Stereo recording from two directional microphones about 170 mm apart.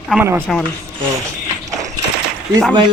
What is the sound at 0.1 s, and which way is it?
Speech, 5° right (ahead or behind).